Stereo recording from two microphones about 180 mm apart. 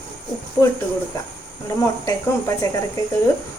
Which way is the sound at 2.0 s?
15° left (ahead or behind).